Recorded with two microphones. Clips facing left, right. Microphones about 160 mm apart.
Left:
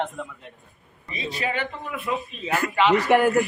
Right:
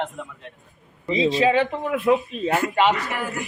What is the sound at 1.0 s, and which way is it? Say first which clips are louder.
Speech: right 11 dB; 90° right.